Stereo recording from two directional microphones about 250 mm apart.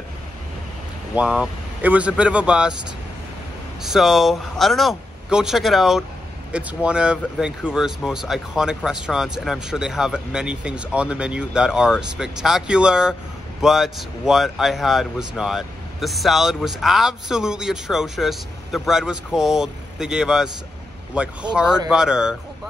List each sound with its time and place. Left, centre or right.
1.1 s speech: centre
3.8 s speech: centre